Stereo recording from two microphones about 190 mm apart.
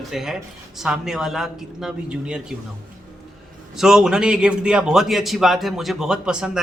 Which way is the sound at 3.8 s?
5° right (ahead or behind).